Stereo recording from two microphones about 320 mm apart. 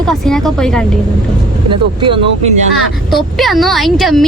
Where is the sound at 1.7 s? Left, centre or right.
Centre.